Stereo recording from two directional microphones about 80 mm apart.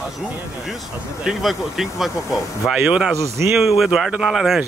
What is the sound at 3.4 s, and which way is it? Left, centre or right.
Speech, right.